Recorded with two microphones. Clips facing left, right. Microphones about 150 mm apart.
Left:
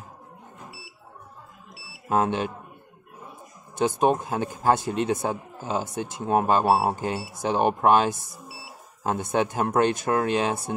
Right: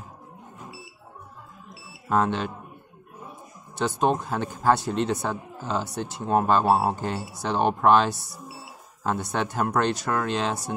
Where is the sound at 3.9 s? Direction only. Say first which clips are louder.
Left 1 dB; 15° left (ahead or behind).